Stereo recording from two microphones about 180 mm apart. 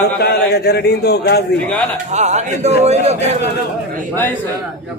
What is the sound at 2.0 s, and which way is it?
A man's voice, 40° right (ahead or behind).